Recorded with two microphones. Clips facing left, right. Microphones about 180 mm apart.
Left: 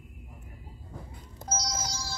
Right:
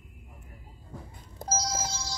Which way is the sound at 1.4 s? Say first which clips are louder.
Right 3 dB; 30° right (ahead or behind).